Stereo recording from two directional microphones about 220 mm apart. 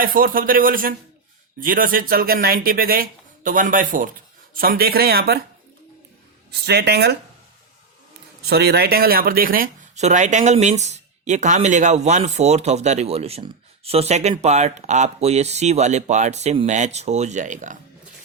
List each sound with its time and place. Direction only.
0.0 s speech: 40° right (ahead or behind)
6.5 s speech: 50° right (ahead or behind)
8.4 s speech: 45° right (ahead or behind)